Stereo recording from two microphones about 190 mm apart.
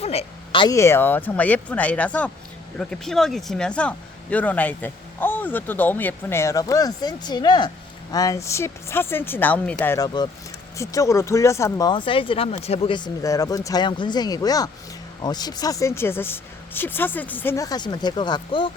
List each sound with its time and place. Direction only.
0.0 s speech: 35° left (ahead or behind)